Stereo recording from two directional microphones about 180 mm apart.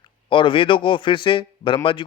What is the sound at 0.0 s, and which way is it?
A man's voice, 25° left (ahead or behind).